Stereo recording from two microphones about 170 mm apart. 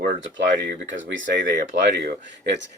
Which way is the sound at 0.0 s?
80° right.